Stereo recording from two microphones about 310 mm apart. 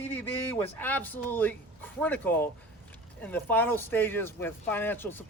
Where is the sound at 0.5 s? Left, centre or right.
Centre.